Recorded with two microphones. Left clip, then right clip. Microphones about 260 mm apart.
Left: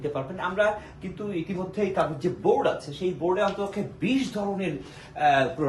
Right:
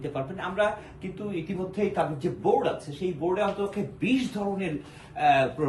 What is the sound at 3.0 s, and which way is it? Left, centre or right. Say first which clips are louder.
Speech: left 2 dB; centre.